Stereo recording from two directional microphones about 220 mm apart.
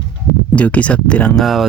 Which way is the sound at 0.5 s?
5° left (ahead or behind).